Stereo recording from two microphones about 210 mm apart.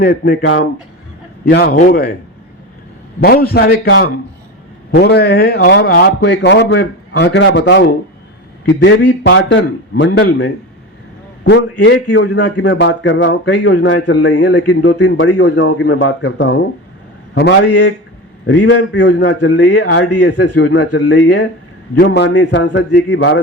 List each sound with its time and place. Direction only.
0.0 s a man's voice: 50° left (ahead or behind)
3.2 s a man's voice: 45° left (ahead or behind)
17.7 s a man's voice: 90° left
18.4 s speech: 60° left (ahead or behind)